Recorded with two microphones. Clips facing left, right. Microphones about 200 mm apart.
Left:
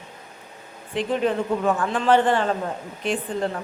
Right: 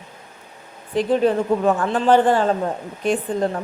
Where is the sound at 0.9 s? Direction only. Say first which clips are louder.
Right 5 dB; 40° right (ahead or behind).